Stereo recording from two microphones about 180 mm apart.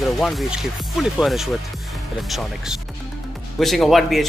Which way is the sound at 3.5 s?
Centre (ahead or behind).